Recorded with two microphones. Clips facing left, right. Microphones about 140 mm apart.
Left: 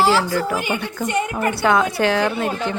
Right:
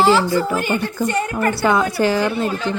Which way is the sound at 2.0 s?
5° right (ahead or behind).